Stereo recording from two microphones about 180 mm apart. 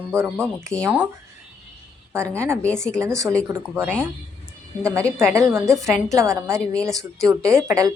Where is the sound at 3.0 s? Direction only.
15° right (ahead or behind).